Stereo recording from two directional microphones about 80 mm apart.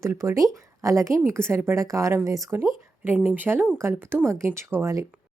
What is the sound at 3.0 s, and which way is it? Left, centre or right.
Speech, right.